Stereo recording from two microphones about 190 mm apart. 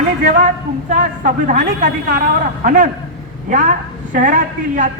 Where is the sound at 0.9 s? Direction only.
40° right (ahead or behind).